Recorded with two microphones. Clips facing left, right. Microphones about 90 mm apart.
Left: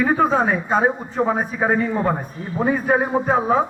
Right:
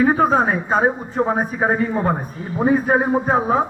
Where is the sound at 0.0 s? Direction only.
35° right (ahead or behind).